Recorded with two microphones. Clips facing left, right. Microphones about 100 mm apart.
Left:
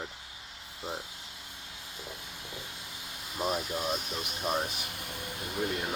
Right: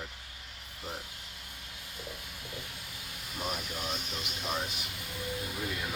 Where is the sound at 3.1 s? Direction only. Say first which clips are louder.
Left 5 dB; 30° left (ahead or behind).